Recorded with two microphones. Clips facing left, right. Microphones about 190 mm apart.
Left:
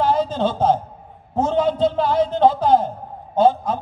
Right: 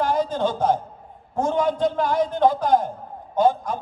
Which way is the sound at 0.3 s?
10° right (ahead or behind).